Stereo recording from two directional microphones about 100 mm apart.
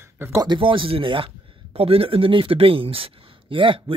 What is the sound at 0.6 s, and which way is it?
Speech, 60° right (ahead or behind).